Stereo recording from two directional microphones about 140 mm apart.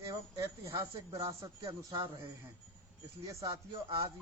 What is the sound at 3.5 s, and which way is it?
Speech, 40° right (ahead or behind).